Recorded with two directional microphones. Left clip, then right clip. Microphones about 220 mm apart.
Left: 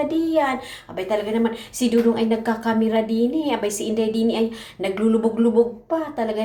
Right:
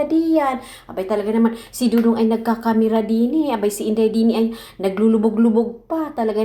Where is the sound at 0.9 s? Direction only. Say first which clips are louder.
Right 2 dB; 30° right (ahead or behind).